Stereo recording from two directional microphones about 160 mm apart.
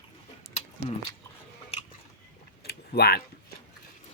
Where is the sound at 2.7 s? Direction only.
90° left.